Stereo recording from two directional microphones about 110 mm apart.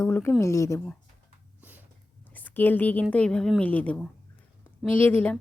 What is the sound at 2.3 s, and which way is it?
A woman's voice, 15° left (ahead or behind).